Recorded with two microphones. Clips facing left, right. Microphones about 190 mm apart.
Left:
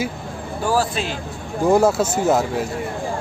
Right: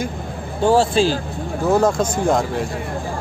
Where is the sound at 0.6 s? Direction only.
25° right (ahead or behind).